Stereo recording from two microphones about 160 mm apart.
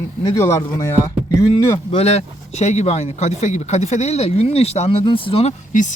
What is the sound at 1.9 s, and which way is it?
Speech, 40° left (ahead or behind).